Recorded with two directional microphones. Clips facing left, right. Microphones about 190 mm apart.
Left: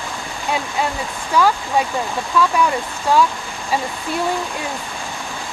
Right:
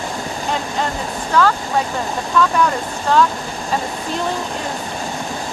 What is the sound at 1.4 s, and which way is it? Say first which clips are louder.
Speech: even; 10° left (ahead or behind).